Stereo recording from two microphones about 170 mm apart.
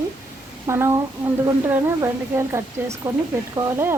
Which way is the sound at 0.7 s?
15° right (ahead or behind).